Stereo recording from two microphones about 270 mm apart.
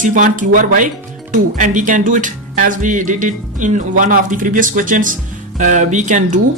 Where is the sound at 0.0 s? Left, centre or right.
Right.